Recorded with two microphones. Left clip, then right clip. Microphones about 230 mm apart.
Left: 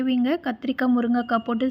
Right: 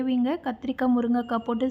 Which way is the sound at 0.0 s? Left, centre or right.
Centre.